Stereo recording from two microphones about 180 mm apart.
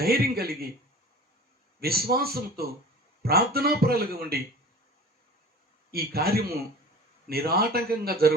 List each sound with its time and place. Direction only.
0.0 s speech: 60° right (ahead or behind)
1.8 s speech: 60° right (ahead or behind)
5.9 s speech: 60° right (ahead or behind)